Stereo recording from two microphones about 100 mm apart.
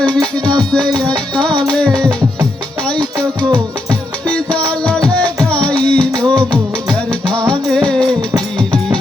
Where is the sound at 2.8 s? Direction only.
10° left (ahead or behind).